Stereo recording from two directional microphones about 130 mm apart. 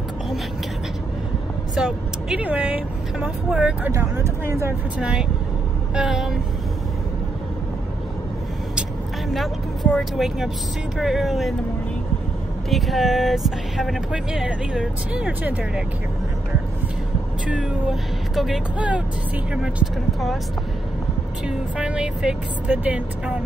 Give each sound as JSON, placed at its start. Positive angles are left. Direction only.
{"t": 1.8, "sound": "speech", "side_deg": -5}
{"t": 3.9, "sound": "speech", "side_deg": -20}
{"t": 4.9, "sound": "speech", "side_deg": -10}
{"t": 9.9, "sound": "speech", "side_deg": 0}
{"t": 12.6, "sound": "speech", "side_deg": 0}
{"t": 17.5, "sound": "speech", "side_deg": -5}
{"t": 21.5, "sound": "speech", "side_deg": -10}